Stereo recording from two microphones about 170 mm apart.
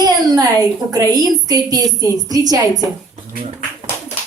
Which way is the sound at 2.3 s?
20° right (ahead or behind).